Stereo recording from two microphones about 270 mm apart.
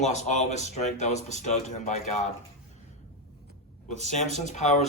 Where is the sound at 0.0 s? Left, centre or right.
Left.